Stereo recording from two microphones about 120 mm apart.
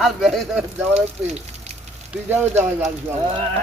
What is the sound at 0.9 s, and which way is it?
Speech, 65° right (ahead or behind).